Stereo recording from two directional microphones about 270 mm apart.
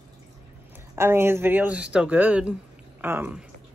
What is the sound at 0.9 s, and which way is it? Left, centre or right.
A woman's voice, centre.